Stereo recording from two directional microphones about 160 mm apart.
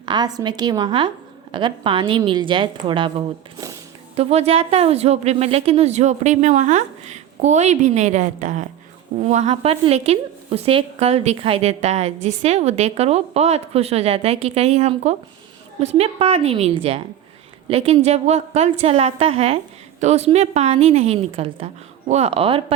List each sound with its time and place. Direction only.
0.0 s a woman's voice: 25° right (ahead or behind)